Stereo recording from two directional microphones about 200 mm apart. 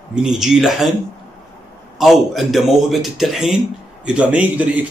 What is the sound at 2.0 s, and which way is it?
Speech, centre (ahead or behind).